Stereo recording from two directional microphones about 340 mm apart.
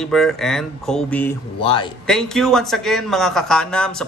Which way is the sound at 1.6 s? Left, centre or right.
Centre.